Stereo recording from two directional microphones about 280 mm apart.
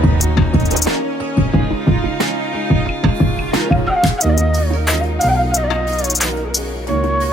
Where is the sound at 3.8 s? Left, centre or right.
Centre.